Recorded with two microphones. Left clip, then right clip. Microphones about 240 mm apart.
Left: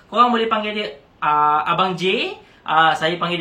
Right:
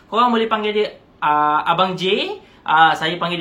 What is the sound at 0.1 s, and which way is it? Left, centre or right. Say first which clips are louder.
Speech: even; centre.